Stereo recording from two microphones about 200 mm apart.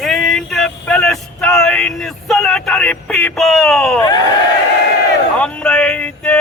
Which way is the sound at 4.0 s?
20° left (ahead or behind).